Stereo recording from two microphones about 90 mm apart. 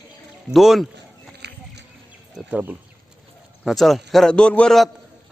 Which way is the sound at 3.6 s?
Centre (ahead or behind).